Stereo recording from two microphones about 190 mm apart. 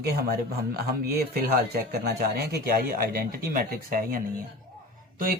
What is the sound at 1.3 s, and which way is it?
Speech, 55° right (ahead or behind).